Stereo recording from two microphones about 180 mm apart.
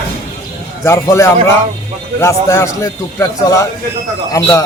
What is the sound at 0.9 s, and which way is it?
A man's voice, 15° left (ahead or behind).